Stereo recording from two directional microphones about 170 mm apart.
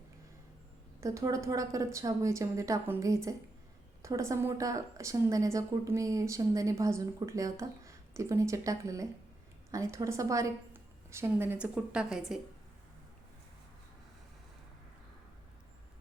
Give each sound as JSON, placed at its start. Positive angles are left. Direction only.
{"t": 1.0, "sound": "a woman's voice", "side_deg": -20}